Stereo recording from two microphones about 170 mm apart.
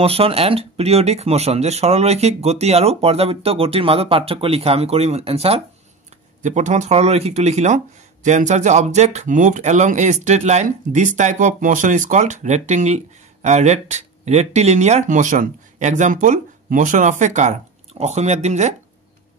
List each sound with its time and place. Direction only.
0.0 s speech: 35° right (ahead or behind)